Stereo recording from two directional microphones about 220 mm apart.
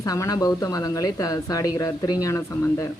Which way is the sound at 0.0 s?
15° left (ahead or behind).